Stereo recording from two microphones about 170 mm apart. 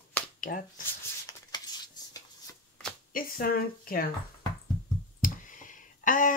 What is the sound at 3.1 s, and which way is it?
Speech, 60° left (ahead or behind).